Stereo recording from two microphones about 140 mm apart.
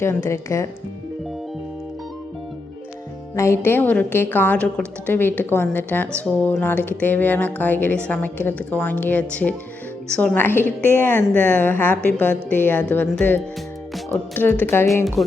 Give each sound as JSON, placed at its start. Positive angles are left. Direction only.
{"t": 0.0, "sound": "speech", "side_deg": 20}
{"t": 3.3, "sound": "a woman's voice", "side_deg": 20}